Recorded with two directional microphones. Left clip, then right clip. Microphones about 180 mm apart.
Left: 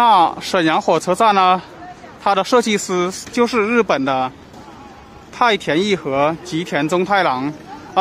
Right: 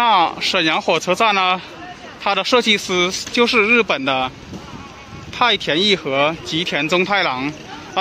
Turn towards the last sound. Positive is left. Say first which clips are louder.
# even
turn(degrees=15)  # may be behind; listen again after turning